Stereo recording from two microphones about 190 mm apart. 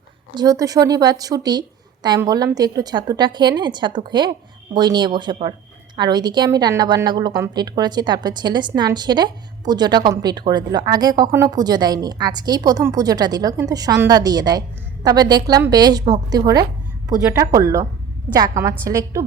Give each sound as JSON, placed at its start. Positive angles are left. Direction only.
{"t": 0.3, "sound": "a woman's voice", "side_deg": -20}